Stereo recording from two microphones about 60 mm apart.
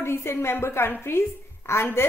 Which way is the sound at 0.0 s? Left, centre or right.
Left.